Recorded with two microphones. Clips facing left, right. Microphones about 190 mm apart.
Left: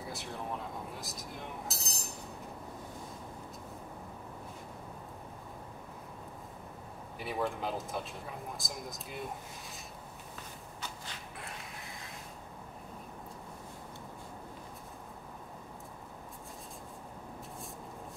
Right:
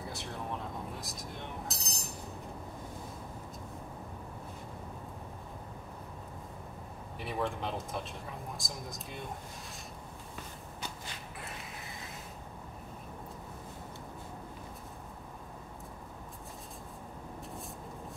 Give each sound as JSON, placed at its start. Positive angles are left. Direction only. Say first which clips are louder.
{"t": 0.1, "sound": "chink", "louder": "left 2 dB", "side_deg": 0}
{"t": 7.2, "sound": "speech", "louder": "even", "side_deg": 0}